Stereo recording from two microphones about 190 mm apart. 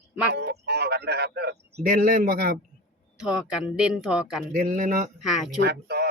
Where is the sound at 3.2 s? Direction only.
5° right (ahead or behind).